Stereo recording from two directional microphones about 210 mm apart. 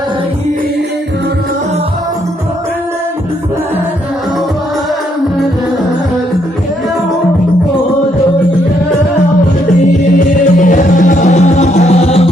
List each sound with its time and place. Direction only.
10.2 s music: 40° left (ahead or behind)